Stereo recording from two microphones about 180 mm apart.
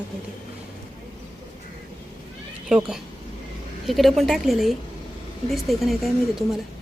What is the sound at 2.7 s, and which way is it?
A woman's voice, 5° right (ahead or behind).